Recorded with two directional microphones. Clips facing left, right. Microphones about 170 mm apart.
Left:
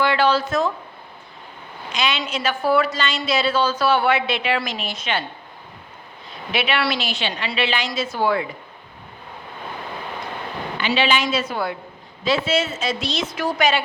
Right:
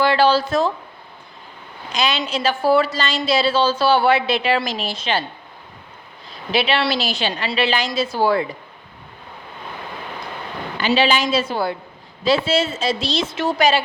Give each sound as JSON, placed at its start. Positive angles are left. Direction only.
{"t": 0.0, "sound": "a sound", "side_deg": -35}
{"t": 1.9, "sound": "a woman's voice", "side_deg": -35}
{"t": 6.5, "sound": "a woman's voice", "side_deg": -30}
{"t": 10.8, "sound": "a woman's voice", "side_deg": -40}